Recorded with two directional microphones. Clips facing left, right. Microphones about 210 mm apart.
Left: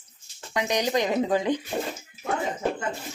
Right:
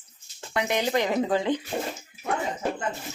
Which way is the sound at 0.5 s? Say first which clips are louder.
Even; 15° left (ahead or behind).